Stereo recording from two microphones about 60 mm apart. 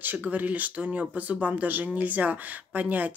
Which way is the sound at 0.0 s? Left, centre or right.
Right.